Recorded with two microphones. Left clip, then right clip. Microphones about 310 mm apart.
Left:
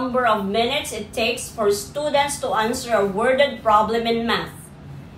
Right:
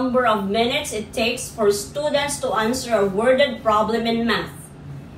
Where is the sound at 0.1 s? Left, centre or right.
Centre.